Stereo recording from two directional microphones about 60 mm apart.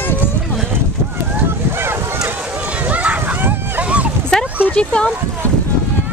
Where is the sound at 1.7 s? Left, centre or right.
Right.